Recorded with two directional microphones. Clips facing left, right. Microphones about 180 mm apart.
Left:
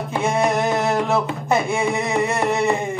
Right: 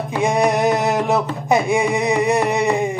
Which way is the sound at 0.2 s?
15° right (ahead or behind).